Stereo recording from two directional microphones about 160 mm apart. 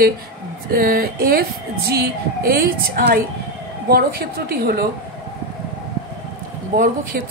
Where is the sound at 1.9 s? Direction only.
75° right (ahead or behind).